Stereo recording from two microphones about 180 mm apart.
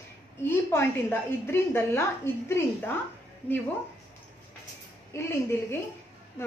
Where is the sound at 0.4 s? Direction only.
15° left (ahead or behind).